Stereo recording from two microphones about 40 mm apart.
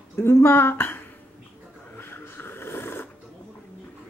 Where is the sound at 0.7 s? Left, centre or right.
Left.